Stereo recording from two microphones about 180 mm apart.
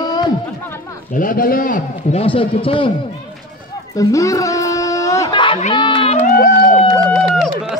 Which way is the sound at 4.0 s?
20° left (ahead or behind).